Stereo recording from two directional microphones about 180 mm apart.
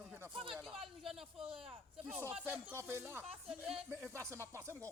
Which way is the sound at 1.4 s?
30° right (ahead or behind).